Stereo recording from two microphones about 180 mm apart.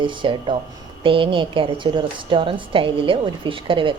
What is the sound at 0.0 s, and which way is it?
A woman's voice, 30° right (ahead or behind).